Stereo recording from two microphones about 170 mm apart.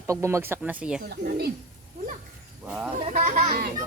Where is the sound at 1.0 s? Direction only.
65° right (ahead or behind).